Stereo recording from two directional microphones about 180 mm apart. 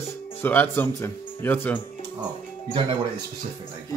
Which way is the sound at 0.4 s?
10° left (ahead or behind).